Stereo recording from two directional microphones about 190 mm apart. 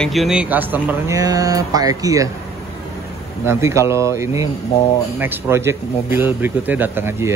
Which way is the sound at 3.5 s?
15° right (ahead or behind).